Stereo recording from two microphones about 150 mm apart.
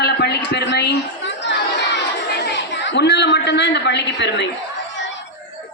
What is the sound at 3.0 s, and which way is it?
Speech, 90° left.